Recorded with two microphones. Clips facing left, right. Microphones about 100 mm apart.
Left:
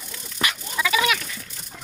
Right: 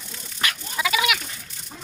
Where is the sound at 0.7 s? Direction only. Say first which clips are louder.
Left 1 dB; 20° right (ahead or behind).